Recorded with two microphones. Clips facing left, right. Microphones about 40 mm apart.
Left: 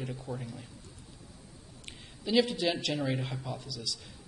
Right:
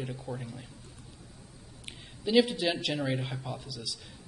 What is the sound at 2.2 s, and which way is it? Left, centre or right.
Speech, centre.